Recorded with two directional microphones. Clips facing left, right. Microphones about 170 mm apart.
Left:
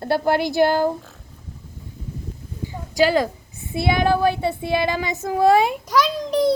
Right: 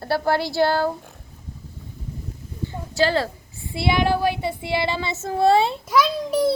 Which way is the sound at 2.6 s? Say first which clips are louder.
Left 3 dB; 15° left (ahead or behind).